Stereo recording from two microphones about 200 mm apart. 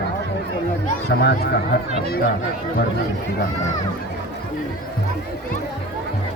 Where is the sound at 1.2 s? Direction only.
50° left (ahead or behind).